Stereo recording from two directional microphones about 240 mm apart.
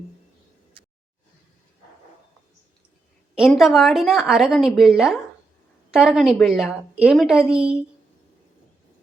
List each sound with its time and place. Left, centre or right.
3.3 s a woman's voice: centre